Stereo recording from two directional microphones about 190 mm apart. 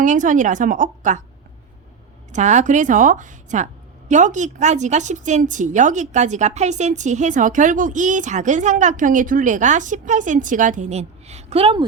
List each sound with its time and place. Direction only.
0.0 s a woman's voice: 40° right (ahead or behind)
2.3 s a woman's voice: 40° right (ahead or behind)